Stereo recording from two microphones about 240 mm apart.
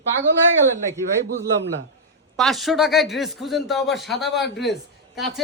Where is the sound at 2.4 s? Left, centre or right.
Centre.